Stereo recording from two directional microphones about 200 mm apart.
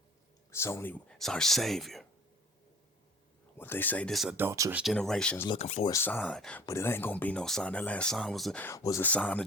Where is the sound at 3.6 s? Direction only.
10° left (ahead or behind).